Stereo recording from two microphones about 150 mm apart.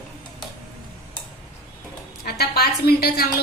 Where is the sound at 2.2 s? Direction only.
90° left.